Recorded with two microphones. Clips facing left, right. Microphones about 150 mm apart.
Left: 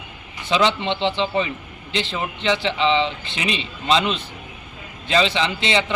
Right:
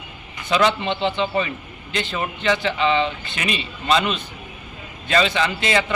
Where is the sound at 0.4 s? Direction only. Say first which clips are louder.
Even; 25° left (ahead or behind).